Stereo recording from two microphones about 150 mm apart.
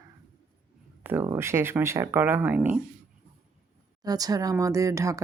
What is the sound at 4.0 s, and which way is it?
A woman's voice, 25° right (ahead or behind).